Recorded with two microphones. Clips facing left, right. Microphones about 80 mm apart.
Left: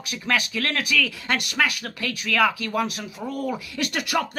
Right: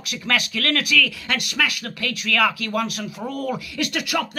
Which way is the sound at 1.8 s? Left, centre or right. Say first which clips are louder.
Right 2 dB; centre.